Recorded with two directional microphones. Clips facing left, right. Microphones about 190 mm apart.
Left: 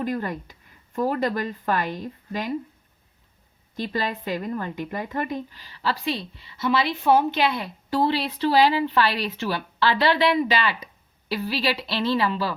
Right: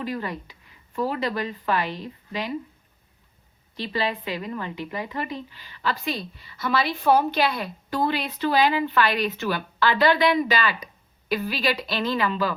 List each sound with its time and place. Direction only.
0.0 s speech: 45° left (ahead or behind)
3.8 s a woman's voice: 45° left (ahead or behind)